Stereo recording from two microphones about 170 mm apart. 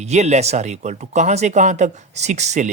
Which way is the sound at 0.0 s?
40° right (ahead or behind).